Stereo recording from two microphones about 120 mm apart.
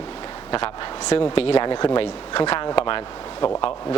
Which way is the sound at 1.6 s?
40° left (ahead or behind).